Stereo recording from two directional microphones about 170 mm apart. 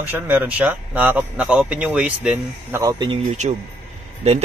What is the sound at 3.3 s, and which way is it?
Speech, 40° right (ahead or behind).